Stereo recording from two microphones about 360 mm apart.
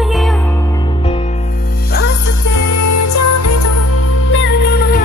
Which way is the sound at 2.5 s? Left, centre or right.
Left.